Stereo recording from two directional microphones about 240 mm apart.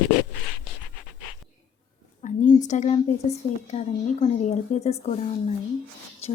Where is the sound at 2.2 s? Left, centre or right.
Left.